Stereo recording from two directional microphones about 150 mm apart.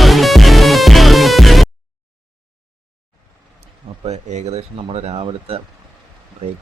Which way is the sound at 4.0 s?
50° right (ahead or behind).